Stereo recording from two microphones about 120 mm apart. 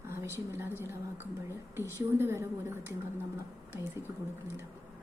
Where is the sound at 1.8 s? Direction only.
20° right (ahead or behind).